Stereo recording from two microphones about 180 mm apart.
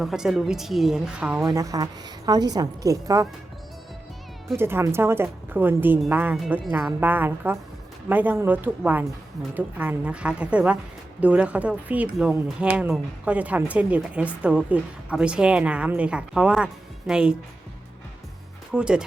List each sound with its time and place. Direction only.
0.0 s a woman's voice: centre (ahead or behind)
1.5 s a woman's voice: 20° right (ahead or behind)
4.5 s a woman's voice: 15° right (ahead or behind)
18.7 s a woman's voice: 5° right (ahead or behind)